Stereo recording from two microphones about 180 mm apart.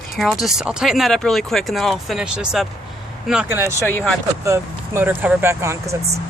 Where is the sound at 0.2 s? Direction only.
Centre (ahead or behind).